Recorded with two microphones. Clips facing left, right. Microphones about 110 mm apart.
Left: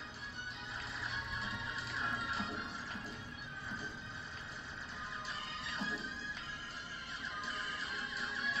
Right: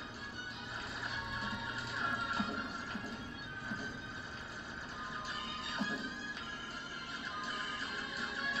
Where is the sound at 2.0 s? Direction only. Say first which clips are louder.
Right 2 dB; 30° right (ahead or behind).